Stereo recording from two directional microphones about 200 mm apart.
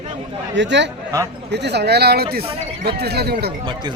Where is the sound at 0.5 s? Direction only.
60° right (ahead or behind).